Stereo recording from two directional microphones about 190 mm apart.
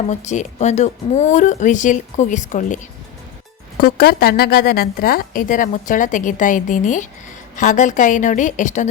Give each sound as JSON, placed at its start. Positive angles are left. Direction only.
{"t": 0.1, "sound": "speech", "side_deg": 40}
{"t": 3.8, "sound": "a woman's voice", "side_deg": 55}